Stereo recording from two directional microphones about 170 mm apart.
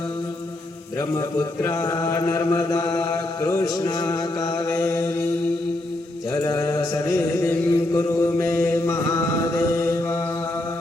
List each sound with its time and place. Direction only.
1.4 s mantra: 20° left (ahead or behind)
6.3 s mantra: 20° left (ahead or behind)